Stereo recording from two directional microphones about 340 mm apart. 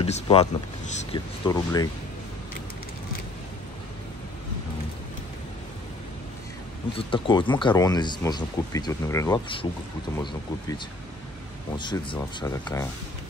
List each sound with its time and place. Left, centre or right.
0.0 s speech: centre
7.0 s speech: centre
11.8 s speech: centre